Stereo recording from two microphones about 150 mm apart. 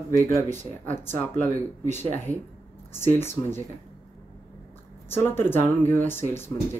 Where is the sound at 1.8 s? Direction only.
50° right (ahead or behind).